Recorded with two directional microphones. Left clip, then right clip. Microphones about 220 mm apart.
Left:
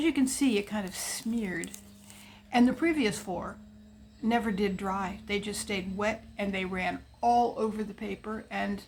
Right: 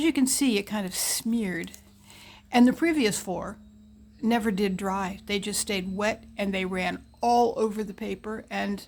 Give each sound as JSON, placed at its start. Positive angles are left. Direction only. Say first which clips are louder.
{"t": 0.0, "sound": "a woman's voice", "louder": "right 3 dB", "side_deg": -50}